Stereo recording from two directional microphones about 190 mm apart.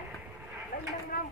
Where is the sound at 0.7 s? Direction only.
45° left (ahead or behind).